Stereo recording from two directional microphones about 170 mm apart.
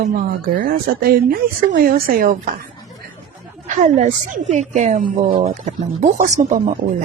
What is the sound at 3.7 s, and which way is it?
A woman's voice, 50° right (ahead or behind).